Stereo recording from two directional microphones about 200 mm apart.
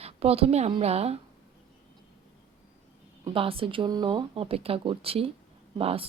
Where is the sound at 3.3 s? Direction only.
25° right (ahead or behind).